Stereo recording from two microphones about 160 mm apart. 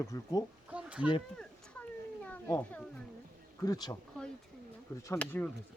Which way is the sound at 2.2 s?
10° left (ahead or behind).